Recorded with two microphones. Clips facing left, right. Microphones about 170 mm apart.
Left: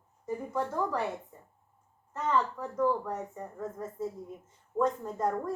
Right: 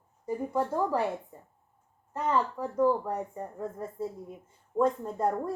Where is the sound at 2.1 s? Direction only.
10° right (ahead or behind).